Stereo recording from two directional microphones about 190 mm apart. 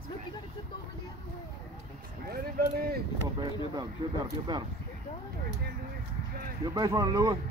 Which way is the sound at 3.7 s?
20° right (ahead or behind).